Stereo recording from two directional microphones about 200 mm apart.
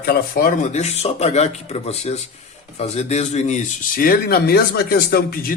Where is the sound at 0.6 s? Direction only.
35° left (ahead or behind).